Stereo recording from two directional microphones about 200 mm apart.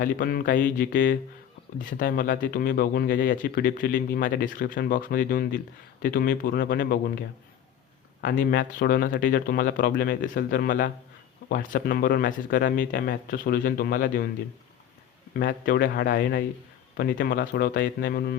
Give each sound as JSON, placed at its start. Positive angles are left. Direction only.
{"t": 0.0, "sound": "speech", "side_deg": 45}
{"t": 15.4, "sound": "speech", "side_deg": 45}